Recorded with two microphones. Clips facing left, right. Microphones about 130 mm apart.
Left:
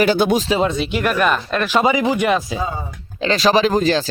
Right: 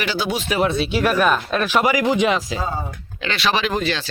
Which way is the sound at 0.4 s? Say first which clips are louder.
Left 2 dB; 20° left (ahead or behind).